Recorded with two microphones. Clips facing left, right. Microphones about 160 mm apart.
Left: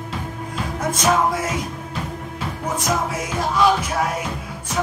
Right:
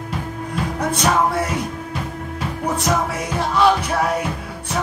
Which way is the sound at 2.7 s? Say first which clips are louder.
Right 1 dB; 65° right (ahead or behind).